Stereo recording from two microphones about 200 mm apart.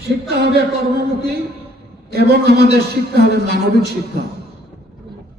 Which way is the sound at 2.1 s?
55° right (ahead or behind).